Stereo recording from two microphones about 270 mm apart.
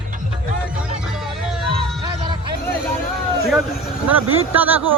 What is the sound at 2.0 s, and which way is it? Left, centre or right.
Music, centre.